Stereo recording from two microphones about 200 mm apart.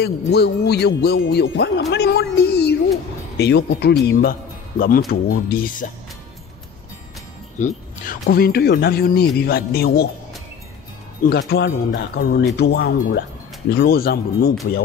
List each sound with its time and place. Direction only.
0.0 s speech: 55° left (ahead or behind)
7.5 s speech: 40° left (ahead or behind)
11.2 s speech: 55° left (ahead or behind)